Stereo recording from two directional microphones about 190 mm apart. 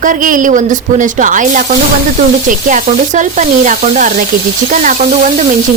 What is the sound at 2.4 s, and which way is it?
Sizzle, 40° right (ahead or behind).